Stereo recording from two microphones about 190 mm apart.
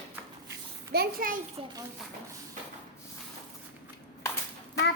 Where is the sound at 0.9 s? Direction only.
50° right (ahead or behind).